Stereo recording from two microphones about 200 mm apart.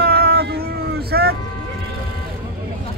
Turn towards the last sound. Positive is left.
turn(degrees=-50)  # may be behind; listen again after turning